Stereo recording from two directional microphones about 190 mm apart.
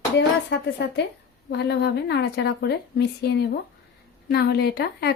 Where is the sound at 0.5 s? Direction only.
60° left (ahead or behind).